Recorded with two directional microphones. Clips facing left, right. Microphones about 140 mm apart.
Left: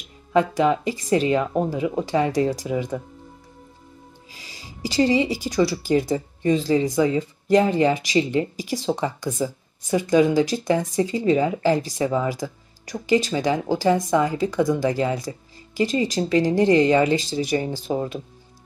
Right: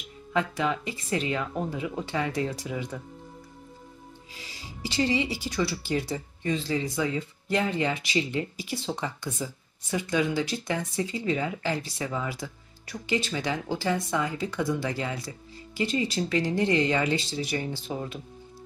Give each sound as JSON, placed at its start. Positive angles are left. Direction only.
{"t": 0.3, "sound": "speech", "side_deg": 35}
{"t": 4.8, "sound": "speech", "side_deg": 40}